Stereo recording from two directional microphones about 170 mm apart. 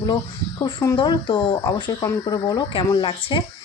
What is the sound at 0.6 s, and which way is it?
Speech, 20° left (ahead or behind).